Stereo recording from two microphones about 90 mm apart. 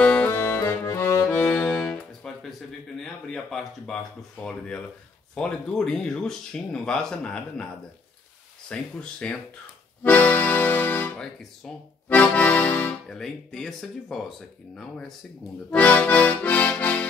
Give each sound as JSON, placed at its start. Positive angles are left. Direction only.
{"t": 0.0, "sound": "music", "side_deg": 15}
{"t": 0.3, "sound": "music", "side_deg": 25}
{"t": 1.3, "sound": "music", "side_deg": 20}
{"t": 1.8, "sound": "music", "side_deg": 5}
{"t": 3.0, "sound": "speech", "side_deg": 5}
{"t": 8.6, "sound": "speech", "side_deg": 10}
{"t": 10.0, "sound": "accordion", "side_deg": 20}
{"t": 12.1, "sound": "speech", "side_deg": 15}
{"t": 13.1, "sound": "speech", "side_deg": 5}
{"t": 15.7, "sound": "speech", "side_deg": 15}